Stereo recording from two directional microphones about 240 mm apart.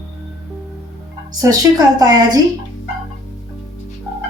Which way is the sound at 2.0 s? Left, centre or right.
Centre.